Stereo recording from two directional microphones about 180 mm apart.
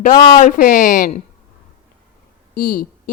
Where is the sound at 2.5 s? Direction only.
55° left (ahead or behind).